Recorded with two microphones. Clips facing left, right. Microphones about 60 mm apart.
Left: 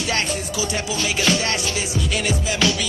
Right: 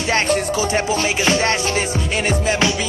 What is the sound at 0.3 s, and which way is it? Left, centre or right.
Music, right.